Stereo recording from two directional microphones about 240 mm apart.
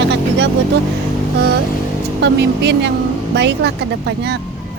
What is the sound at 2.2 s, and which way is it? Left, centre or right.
Speech, right.